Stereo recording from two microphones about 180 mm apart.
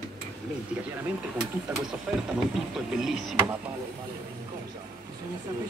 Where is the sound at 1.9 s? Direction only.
5° right (ahead or behind).